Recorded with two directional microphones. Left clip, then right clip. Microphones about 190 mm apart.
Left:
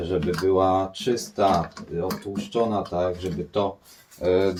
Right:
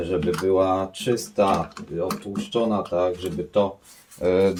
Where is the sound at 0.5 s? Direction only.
35° right (ahead or behind).